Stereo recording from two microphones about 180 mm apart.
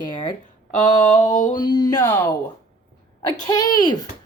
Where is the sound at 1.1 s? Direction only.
45° left (ahead or behind).